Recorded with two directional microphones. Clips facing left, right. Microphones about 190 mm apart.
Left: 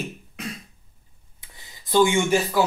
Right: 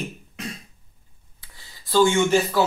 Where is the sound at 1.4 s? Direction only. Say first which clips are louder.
Left 1 dB; 20° left (ahead or behind).